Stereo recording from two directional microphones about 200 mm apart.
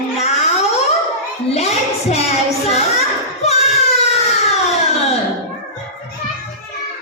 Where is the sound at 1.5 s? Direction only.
30° left (ahead or behind).